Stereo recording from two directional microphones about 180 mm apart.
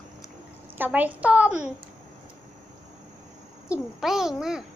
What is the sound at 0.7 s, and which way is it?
Speech, 10° right (ahead or behind).